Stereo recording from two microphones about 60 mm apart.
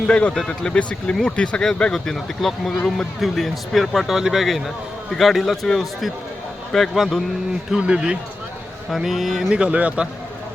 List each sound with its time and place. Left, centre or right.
0.1 s speech: centre
7.7 s speech: centre
8.9 s speech: centre
9.5 s speech: centre